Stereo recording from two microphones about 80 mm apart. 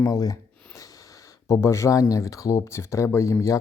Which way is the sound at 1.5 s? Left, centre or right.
Left.